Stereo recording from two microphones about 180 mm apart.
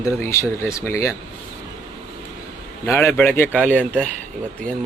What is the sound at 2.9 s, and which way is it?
Speech, 15° left (ahead or behind).